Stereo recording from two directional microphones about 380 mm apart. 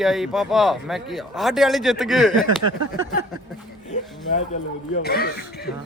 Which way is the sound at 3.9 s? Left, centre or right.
Centre.